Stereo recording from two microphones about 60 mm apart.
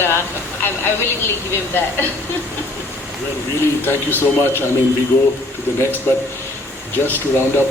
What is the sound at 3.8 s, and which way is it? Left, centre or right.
Speech, left.